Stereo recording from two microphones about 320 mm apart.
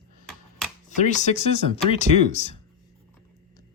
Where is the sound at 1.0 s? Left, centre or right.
Left.